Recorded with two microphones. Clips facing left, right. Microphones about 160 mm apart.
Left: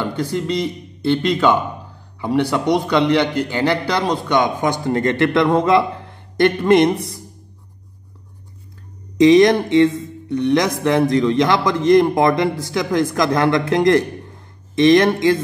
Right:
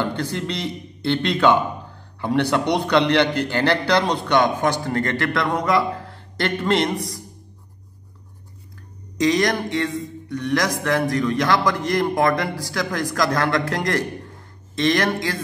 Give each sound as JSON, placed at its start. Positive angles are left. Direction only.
{"t": 0.0, "sound": "a man's voice", "side_deg": 10}
{"t": 9.2, "sound": "a man's voice", "side_deg": 25}